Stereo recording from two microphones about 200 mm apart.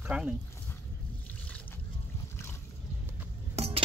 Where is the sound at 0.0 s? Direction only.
5° right (ahead or behind).